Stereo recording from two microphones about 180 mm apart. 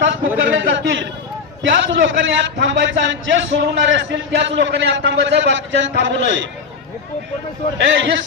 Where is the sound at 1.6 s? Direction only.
90° right.